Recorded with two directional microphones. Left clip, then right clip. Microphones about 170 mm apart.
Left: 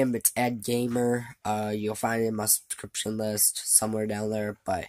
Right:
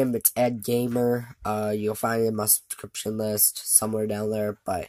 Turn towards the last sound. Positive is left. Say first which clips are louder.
# right 2 dB
turn(degrees=0)  # may be behind; listen again after turning